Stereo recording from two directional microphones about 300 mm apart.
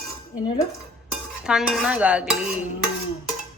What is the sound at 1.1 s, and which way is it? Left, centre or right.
Dishes, centre.